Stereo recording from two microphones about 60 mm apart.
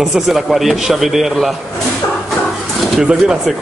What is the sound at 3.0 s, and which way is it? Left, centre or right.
Speech, centre.